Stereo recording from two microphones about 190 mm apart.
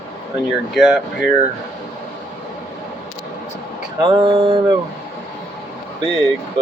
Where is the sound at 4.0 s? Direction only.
25° right (ahead or behind).